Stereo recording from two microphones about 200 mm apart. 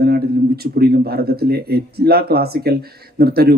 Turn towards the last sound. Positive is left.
turn(degrees=-50)  # may be behind; listen again after turning